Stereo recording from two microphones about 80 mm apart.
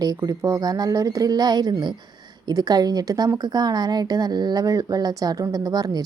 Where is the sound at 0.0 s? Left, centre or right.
Right.